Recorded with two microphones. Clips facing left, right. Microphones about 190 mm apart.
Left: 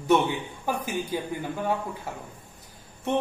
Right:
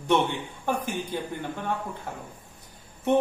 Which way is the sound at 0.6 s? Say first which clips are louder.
Right 1 dB; 5° left (ahead or behind).